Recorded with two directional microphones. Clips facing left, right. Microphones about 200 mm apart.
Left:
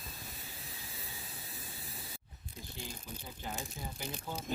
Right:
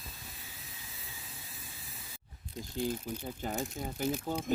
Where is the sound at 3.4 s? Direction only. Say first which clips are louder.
Right 5 dB; 50° right (ahead or behind).